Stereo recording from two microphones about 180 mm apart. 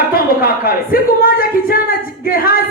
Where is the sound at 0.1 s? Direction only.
55° left (ahead or behind).